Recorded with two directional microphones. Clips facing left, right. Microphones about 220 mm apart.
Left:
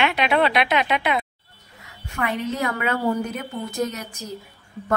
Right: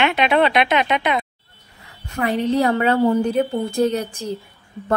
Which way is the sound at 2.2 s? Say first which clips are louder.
Right 6 dB; 35° right (ahead or behind).